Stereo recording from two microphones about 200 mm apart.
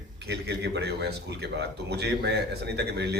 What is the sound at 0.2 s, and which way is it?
A man's voice, 55° right (ahead or behind).